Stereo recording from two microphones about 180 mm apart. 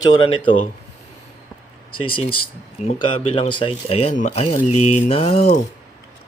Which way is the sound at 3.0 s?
30° left (ahead or behind).